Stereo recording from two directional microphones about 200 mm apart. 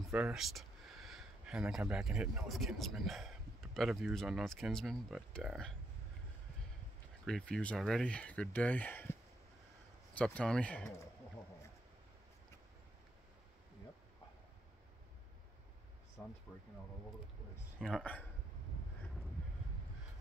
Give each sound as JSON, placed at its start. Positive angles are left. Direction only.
{"t": 0.0, "sound": "speech", "side_deg": -5}
{"t": 7.2, "sound": "speech", "side_deg": 5}
{"t": 10.1, "sound": "speech", "side_deg": 5}
{"t": 16.2, "sound": "speech", "side_deg": 5}
{"t": 17.7, "sound": "speech", "side_deg": 5}